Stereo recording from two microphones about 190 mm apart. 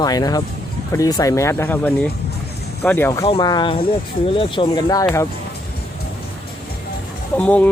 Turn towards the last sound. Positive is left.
turn(degrees=5)  # may be behind; listen again after turning